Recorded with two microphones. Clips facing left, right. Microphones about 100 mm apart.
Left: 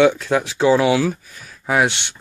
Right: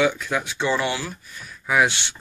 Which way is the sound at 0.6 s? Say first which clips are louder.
Left 10 dB; 90° left.